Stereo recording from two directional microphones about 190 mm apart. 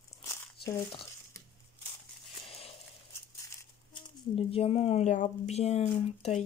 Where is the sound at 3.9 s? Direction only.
30° left (ahead or behind).